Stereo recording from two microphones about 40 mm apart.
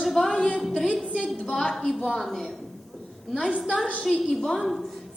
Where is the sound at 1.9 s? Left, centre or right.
Centre.